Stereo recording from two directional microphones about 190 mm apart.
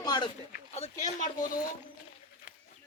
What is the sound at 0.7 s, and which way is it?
Speech, 40° left (ahead or behind).